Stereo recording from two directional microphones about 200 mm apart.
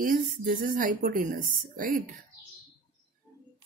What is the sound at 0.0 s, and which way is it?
Speech, 45° right (ahead or behind).